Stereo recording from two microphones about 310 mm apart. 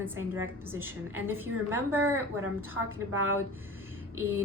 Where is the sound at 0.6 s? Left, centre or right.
Centre.